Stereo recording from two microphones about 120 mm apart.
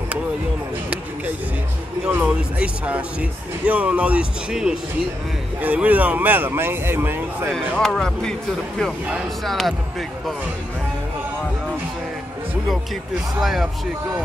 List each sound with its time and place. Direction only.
2.0 s speech: 10° right (ahead or behind)
7.4 s speech: 5° left (ahead or behind)
13.4 s speech: centre (ahead or behind)